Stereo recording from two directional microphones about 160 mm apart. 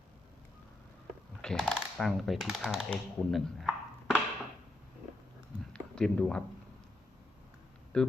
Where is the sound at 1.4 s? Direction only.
5° left (ahead or behind).